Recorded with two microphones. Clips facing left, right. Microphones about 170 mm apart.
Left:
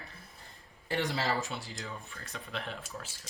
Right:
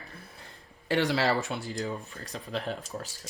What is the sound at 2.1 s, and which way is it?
Speech, 35° right (ahead or behind).